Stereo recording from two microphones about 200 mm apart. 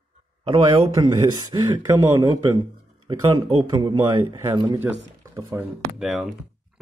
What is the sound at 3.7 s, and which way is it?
Speech, 20° right (ahead or behind).